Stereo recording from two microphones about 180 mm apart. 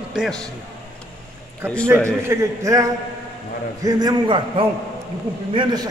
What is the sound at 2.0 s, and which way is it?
A man's voice, 15° right (ahead or behind).